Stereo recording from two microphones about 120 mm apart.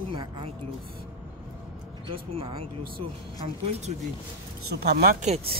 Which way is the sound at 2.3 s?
50° right (ahead or behind).